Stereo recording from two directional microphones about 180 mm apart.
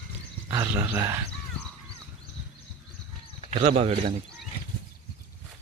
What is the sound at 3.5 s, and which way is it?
Speech, 35° right (ahead or behind).